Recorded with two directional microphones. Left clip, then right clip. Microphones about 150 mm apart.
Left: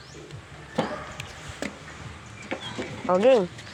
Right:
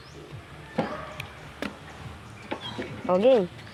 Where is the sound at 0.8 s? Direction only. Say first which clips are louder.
Left 1 dB; 50° left (ahead or behind).